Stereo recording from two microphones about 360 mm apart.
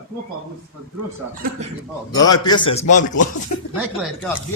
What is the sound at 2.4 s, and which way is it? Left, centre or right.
Speech, centre.